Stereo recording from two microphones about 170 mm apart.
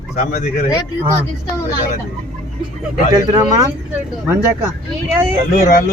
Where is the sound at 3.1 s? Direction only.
20° right (ahead or behind).